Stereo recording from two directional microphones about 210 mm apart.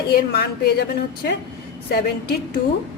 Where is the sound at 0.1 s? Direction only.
50° left (ahead or behind).